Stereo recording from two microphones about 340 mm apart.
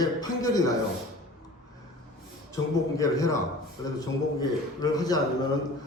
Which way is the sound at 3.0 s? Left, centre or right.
Centre.